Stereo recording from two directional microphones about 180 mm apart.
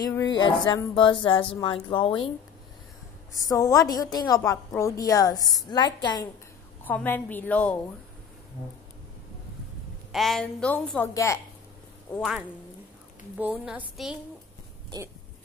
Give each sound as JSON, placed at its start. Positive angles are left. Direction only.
{"t": 0.0, "sound": "speech", "side_deg": 20}
{"t": 3.4, "sound": "speech", "side_deg": 20}
{"t": 6.8, "sound": "a woman's voice", "side_deg": 10}
{"t": 10.1, "sound": "a woman's voice", "side_deg": 0}
{"t": 12.1, "sound": "speech", "side_deg": 5}
{"t": 13.4, "sound": "a woman's voice", "side_deg": -10}